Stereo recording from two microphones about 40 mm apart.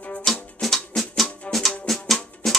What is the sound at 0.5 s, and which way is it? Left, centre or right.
Music, centre.